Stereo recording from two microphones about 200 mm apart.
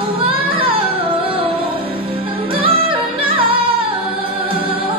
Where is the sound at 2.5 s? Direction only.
25° right (ahead or behind).